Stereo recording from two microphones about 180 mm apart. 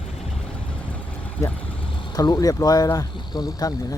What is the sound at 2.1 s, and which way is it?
Speech, 20° left (ahead or behind).